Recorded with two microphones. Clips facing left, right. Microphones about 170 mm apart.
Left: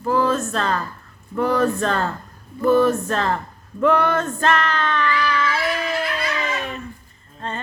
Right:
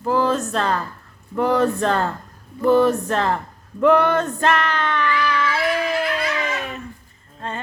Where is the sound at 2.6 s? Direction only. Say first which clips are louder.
Right 1 dB; 20° right (ahead or behind).